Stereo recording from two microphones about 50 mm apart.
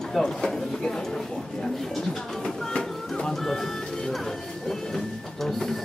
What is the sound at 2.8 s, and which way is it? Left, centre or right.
Music, centre.